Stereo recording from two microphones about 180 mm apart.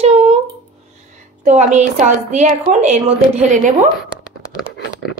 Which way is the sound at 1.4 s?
45° right (ahead or behind).